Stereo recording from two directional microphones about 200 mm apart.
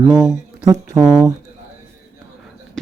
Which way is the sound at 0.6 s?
20° right (ahead or behind).